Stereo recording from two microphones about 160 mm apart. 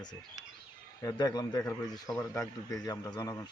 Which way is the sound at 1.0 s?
25° left (ahead or behind).